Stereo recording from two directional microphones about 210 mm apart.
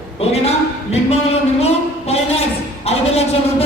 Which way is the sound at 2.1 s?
30° left (ahead or behind).